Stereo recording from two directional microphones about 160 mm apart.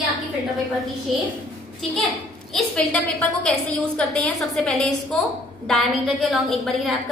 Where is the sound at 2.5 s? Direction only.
5° left (ahead or behind).